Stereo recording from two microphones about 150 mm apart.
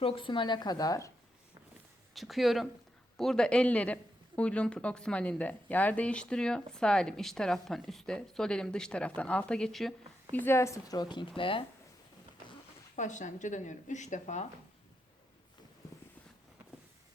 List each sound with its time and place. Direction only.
0.0 s speech: 35° left (ahead or behind)
2.1 s speech: centre (ahead or behind)
10.3 s speech: 15° left (ahead or behind); by 11.6 s 35° left (ahead or behind)
13.0 s speech: 55° left (ahead or behind)